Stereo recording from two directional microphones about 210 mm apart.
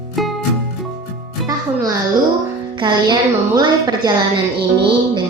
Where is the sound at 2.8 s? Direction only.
20° right (ahead or behind).